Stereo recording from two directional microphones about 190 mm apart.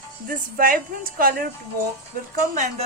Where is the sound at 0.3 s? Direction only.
45° right (ahead or behind).